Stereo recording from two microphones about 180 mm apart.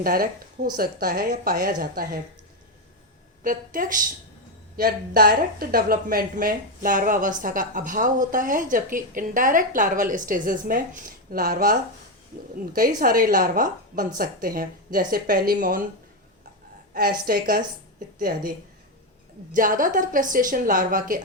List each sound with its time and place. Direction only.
0.0 s a woman's voice: 55° right (ahead or behind)
3.4 s a woman's voice: 50° right (ahead or behind)
13.0 s a woman's voice: 50° right (ahead or behind)
16.9 s a woman's voice: 55° right (ahead or behind)
19.5 s a woman's voice: 50° right (ahead or behind)